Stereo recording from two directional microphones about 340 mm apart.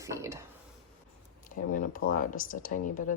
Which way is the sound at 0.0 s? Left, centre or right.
Centre.